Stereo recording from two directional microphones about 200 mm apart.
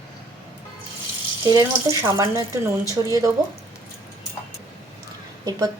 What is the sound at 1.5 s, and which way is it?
Speech, 15° right (ahead or behind).